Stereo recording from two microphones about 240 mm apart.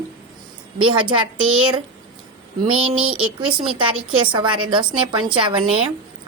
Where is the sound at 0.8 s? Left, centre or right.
Right.